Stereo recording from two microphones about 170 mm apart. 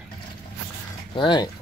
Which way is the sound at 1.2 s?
30° left (ahead or behind).